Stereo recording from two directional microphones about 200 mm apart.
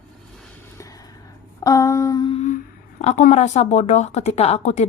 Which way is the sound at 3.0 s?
35° left (ahead or behind).